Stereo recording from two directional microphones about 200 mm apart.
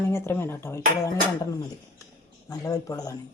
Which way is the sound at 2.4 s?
15° left (ahead or behind).